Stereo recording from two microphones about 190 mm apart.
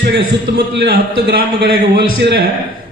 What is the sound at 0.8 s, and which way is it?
A man's voice, 55° right (ahead or behind).